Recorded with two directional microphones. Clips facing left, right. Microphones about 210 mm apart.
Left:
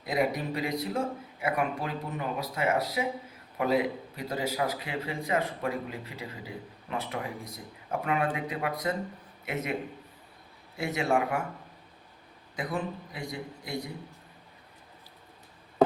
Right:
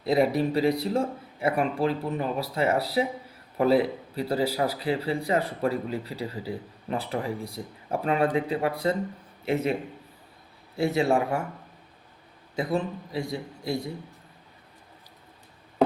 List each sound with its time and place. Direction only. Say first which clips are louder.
0.0 s speech: right 6 dB; 30° right (ahead or behind)
10.8 s speech: right 5 dB; 30° right (ahead or behind)
12.5 s a man's voice: right 5 dB; 25° right (ahead or behind)